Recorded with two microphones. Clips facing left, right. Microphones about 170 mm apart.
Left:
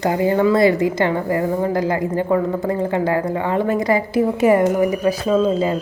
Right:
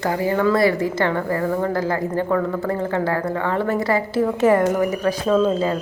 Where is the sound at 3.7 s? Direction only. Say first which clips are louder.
Left 3 dB; 15° left (ahead or behind).